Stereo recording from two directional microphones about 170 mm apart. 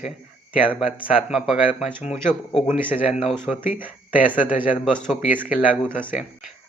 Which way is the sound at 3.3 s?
Centre (ahead or behind).